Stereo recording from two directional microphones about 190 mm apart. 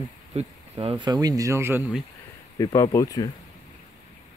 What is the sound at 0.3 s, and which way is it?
Speech, 30° right (ahead or behind).